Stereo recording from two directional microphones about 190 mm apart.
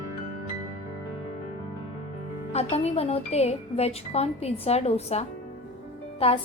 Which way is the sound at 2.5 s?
35° left (ahead or behind).